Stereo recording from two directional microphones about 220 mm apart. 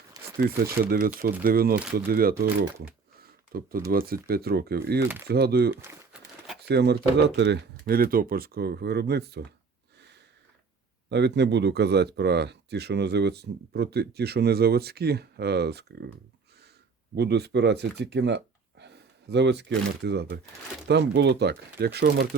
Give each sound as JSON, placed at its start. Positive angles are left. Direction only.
{"t": 0.4, "sound": "speech", "side_deg": -45}
{"t": 3.2, "sound": "a sound", "side_deg": -40}
{"t": 3.9, "sound": "speech", "side_deg": -45}
{"t": 5.7, "sound": "speech", "side_deg": -10}
{"t": 6.6, "sound": "speech", "side_deg": -50}
{"t": 11.1, "sound": "speech", "side_deg": -50}
{"t": 17.2, "sound": "speech", "side_deg": -50}